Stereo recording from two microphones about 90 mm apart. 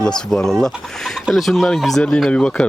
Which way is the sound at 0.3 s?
5° left (ahead or behind).